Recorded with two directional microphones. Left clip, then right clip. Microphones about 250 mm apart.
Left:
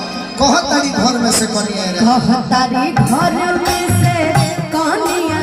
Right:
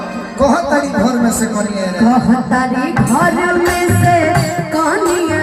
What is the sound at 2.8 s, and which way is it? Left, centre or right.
Music, left.